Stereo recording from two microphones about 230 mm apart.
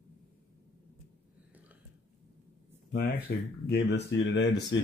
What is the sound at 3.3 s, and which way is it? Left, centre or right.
Speech, left.